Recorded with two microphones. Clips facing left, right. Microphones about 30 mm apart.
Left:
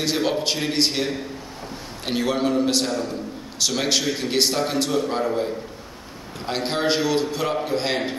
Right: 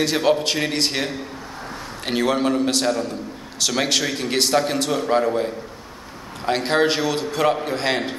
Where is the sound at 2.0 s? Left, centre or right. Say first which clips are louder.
Right 2 dB; centre.